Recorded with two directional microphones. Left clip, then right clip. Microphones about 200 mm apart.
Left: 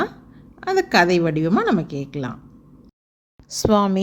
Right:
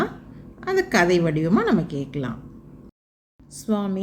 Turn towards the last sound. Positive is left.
turn(degrees=45)  # may be behind; listen again after turning